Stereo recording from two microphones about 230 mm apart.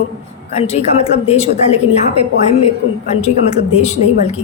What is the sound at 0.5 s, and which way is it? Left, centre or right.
A woman's voice, left.